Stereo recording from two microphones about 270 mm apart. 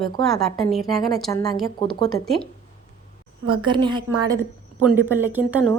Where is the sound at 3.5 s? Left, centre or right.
Centre.